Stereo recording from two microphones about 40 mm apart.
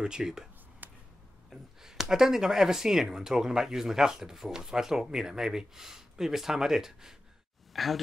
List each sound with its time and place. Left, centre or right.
0.0 s speech: centre
0.8 s a sound: right
1.5 s speech: centre
7.7 s speech: centre